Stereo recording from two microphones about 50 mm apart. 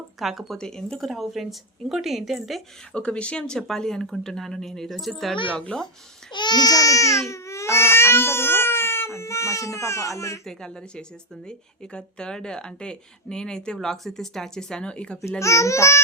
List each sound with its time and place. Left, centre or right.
0.2 s a woman's voice: centre
0.6 s speech: centre
1.0 s a woman's voice: centre
2.9 s a woman's voice: left; by 5.3 s centre
5.3 s speech: centre
6.9 s speech: left
10.4 s speech: centre
15.4 s speech: left